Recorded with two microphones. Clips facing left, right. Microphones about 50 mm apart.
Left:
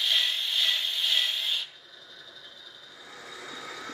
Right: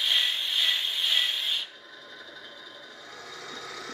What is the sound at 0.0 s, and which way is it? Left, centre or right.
Wood, centre.